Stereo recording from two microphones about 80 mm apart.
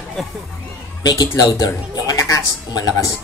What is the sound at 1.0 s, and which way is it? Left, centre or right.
Speech, left.